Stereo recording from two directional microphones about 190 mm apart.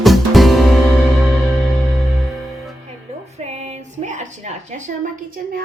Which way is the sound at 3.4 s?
35° right (ahead or behind).